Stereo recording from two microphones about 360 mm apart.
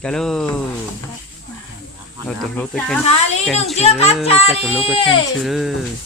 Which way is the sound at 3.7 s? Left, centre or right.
Centre.